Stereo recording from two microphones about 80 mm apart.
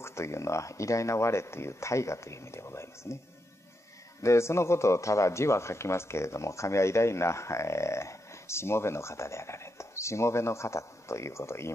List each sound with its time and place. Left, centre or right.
0.0 s speech: left
4.2 s speech: left